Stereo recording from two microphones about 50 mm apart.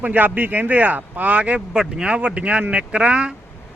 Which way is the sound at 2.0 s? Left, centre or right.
Right.